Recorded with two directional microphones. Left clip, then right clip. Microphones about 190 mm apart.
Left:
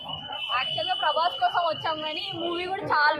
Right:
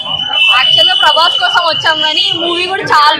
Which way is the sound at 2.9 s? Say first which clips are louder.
Right 14 dB; 15° left (ahead or behind).